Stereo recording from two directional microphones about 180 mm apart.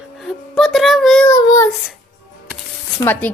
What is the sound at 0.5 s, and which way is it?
Child singing, centre (ahead or behind).